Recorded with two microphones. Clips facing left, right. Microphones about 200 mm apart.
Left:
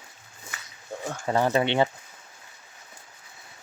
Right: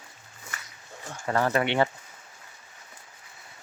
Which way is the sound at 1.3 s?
20° left (ahead or behind).